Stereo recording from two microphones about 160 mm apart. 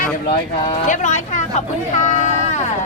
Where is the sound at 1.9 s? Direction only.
45° left (ahead or behind).